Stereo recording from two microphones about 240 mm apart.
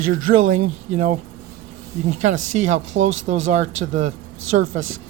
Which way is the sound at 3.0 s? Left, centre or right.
Right.